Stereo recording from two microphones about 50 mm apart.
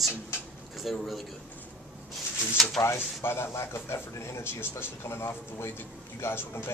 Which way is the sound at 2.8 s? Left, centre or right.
Left.